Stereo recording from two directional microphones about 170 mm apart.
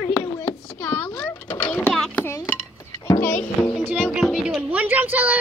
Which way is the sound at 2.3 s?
15° left (ahead or behind).